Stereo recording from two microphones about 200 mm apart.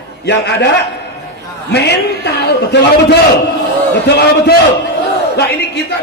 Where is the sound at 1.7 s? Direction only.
55° left (ahead or behind).